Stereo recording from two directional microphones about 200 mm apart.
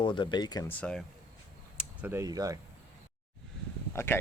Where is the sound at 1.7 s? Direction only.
10° right (ahead or behind).